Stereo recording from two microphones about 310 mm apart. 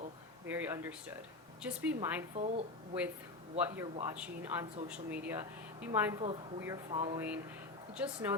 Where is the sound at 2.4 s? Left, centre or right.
Right.